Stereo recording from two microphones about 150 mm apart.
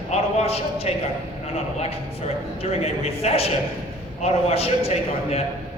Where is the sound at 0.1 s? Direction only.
45° left (ahead or behind).